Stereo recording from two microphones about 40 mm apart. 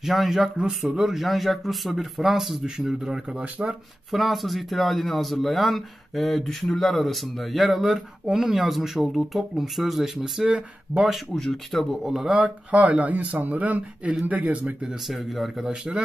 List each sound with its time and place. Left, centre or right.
0.0 s speech: centre
3.0 s speech: right
4.1 s speech: centre
10.9 s speech: centre
12.0 s speech: centre
12.3 s speech: right
13.1 s speech: right
15.0 s speech: centre
15.6 s speech: centre